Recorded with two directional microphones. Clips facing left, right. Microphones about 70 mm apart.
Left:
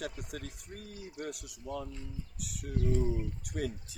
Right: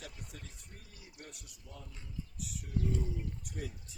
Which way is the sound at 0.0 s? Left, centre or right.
Left.